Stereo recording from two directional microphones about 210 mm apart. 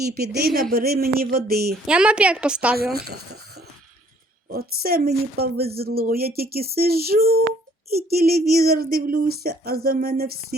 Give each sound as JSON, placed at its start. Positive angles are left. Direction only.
{"t": 0.0, "sound": "speech", "side_deg": -50}
{"t": 1.7, "sound": "a woman's voice", "side_deg": -5}
{"t": 2.7, "sound": "speech", "side_deg": -50}
{"t": 4.4, "sound": "speech", "side_deg": -45}